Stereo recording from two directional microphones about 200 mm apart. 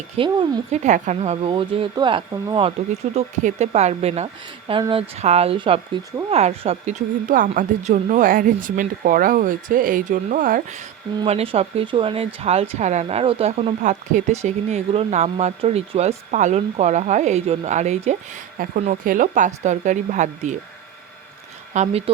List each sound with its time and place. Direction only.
0.2 s speech: 25° right (ahead or behind)
0.8 s speech: 35° right (ahead or behind)
11.3 s speech: 30° right (ahead or behind)
21.7 s speech: 35° right (ahead or behind)